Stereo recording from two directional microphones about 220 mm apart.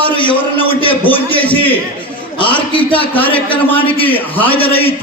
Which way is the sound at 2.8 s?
10° left (ahead or behind).